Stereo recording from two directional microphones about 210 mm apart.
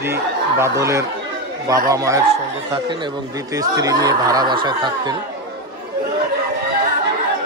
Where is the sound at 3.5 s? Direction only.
20° right (ahead or behind).